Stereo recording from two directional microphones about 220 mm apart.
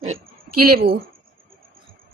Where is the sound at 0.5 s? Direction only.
90° right.